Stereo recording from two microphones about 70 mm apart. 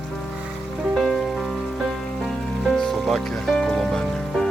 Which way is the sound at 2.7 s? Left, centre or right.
Centre.